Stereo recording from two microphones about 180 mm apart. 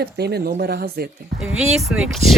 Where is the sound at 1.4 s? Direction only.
Centre (ahead or behind).